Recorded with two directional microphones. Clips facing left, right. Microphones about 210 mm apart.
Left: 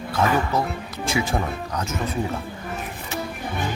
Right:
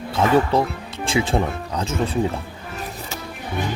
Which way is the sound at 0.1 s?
30° right (ahead or behind).